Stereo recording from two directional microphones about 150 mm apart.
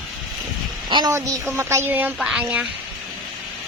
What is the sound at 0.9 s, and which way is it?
A woman's voice, 30° right (ahead or behind).